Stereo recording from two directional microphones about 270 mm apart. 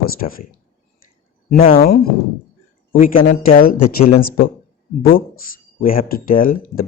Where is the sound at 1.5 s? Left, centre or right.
Left.